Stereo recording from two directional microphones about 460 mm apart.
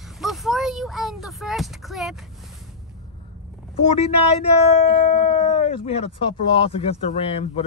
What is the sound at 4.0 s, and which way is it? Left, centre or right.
Speech, centre.